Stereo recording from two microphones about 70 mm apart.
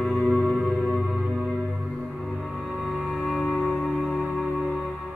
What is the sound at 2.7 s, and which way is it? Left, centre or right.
Music, centre.